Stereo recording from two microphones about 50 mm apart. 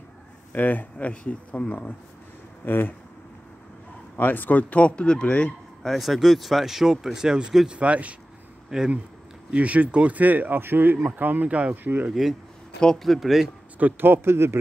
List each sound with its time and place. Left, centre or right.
0.5 s speech: left
2.6 s speech: left
4.2 s speech: left
5.8 s speech: centre
7.8 s speech: right
8.6 s speech: centre
9.5 s speech: right
10.6 s speech: right
11.7 s speech: right
12.1 s speech: centre
12.8 s speech: centre
13.7 s speech: right